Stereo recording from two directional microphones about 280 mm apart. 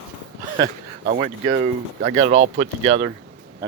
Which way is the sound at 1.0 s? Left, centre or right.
Right.